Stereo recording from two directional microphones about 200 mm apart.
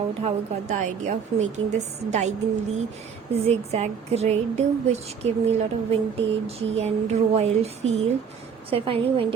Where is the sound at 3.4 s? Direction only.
30° right (ahead or behind).